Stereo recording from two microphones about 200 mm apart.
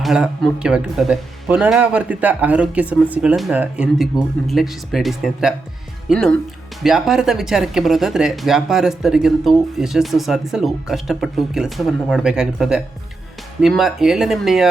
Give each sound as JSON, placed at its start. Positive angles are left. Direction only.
{"t": 0.0, "sound": "speech", "side_deg": -5}